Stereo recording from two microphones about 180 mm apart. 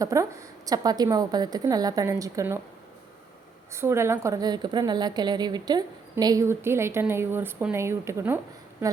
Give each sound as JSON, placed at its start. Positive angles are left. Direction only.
{"t": 0.0, "sound": "a woman's voice", "side_deg": -15}
{"t": 3.7, "sound": "a woman's voice", "side_deg": -15}